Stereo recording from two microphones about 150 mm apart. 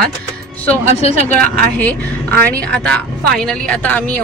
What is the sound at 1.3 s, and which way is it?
Speech, 10° left (ahead or behind).